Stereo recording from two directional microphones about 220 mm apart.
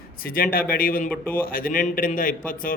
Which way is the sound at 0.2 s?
40° left (ahead or behind).